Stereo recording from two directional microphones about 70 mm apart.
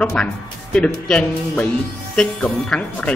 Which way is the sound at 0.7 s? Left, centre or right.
Centre.